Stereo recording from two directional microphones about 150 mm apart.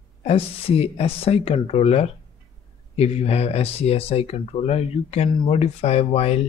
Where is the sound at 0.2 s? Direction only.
40° left (ahead or behind).